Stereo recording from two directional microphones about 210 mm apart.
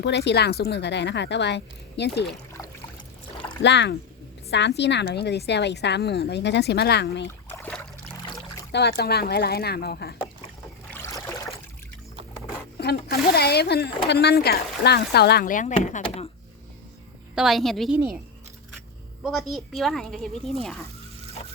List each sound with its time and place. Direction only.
0.0 s a woman's voice: 55° left (ahead or behind)
3.6 s a woman's voice: 55° left (ahead or behind)
7.5 s boat: 10° left (ahead or behind)
8.7 s speech: 50° left (ahead or behind)
10.9 s boat: 10° left (ahead or behind)
12.7 s speech: 50° left (ahead or behind); by 16.3 s 30° left (ahead or behind)
17.3 s speech: centre (ahead or behind)
19.2 s speech: centre (ahead or behind)